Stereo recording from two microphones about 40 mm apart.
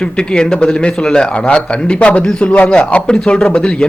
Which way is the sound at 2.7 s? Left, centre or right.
Left.